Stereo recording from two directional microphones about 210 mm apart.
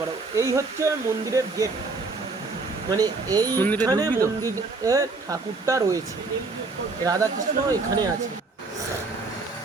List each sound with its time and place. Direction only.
0.3 s speech: 15° right (ahead or behind)
2.9 s speech: 20° right (ahead or behind)
3.6 s speech: 10° left (ahead or behind)
3.8 s speech: 15° right (ahead or behind)
7.0 s speech: 15° right (ahead or behind)